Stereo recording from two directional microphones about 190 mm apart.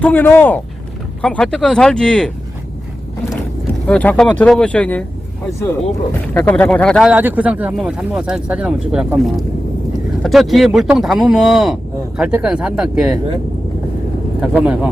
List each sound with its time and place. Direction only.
0.0 s speech: 10° left (ahead or behind)
3.8 s speech: 5° left (ahead or behind)
6.2 s speech: 10° left (ahead or behind)
7.1 s speech: 10° right (ahead or behind)
14.4 s speech: 5° right (ahead or behind)